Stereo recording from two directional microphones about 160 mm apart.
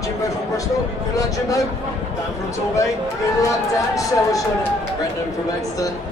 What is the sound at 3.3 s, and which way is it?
Speech, 20° left (ahead or behind).